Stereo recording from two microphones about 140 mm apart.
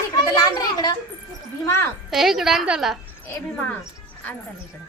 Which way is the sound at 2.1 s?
Centre (ahead or behind).